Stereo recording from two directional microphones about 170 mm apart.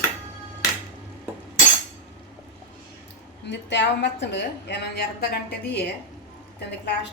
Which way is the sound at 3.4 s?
90° left.